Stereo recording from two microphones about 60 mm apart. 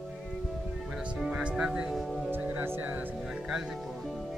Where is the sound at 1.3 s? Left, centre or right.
Centre.